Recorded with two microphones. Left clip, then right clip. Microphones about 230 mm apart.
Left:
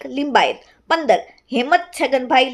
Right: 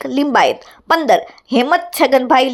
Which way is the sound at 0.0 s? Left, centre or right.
Centre.